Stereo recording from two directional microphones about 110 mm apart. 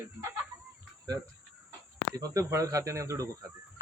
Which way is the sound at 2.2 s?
30° right (ahead or behind).